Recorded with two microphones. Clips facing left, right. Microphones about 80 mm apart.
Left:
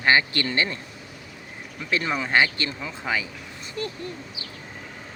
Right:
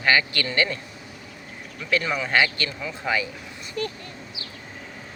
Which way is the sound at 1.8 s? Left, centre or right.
Left.